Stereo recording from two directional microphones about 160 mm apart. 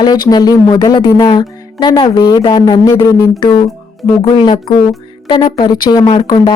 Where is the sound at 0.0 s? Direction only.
25° left (ahead or behind).